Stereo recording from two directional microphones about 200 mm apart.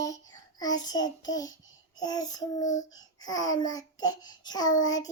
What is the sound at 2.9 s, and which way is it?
Babbling, 20° left (ahead or behind).